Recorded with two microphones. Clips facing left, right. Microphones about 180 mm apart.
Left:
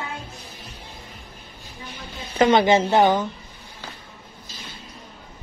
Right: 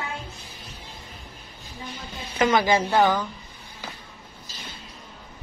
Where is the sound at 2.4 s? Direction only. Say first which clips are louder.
Left 4 dB; 25° left (ahead or behind).